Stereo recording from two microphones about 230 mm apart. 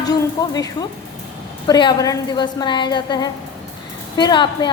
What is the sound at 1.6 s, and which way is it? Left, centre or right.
A woman's voice, centre.